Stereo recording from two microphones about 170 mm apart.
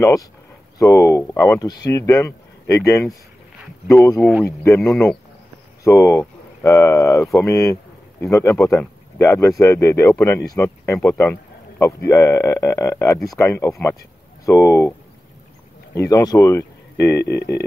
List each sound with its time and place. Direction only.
0.0 s speech: 20° left (ahead or behind)
17.2 s music: 80° left